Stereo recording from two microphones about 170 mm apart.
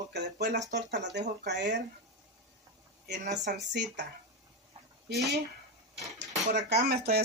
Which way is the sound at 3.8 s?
75° right (ahead or behind).